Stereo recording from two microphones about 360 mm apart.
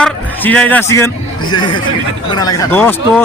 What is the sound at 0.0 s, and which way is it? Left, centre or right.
A man's voice, centre.